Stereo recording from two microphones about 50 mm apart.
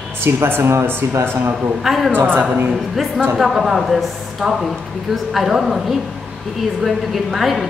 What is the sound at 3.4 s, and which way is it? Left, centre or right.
A woman's voice, centre.